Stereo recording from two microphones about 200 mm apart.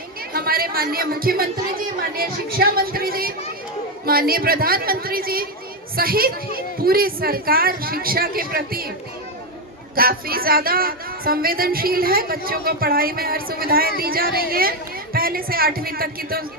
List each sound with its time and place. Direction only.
0.3 s speech: 50° right (ahead or behind)
9.9 s speech: 50° right (ahead or behind)